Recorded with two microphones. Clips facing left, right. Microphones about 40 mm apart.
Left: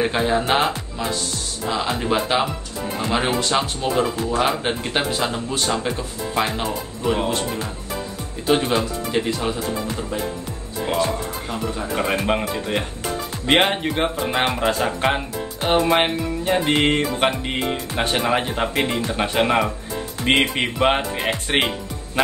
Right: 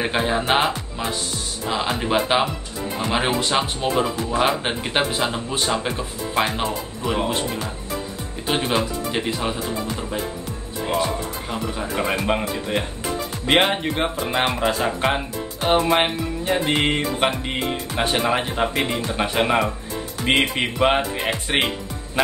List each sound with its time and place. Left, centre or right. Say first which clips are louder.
0.0 s speech: left 2 dB; centre
7.0 s speech: left 2 dB; centre
8.5 s speech: left 3 dB; centre
11.5 s music: left 1 dB; centre
21.5 s speech: left 1 dB; centre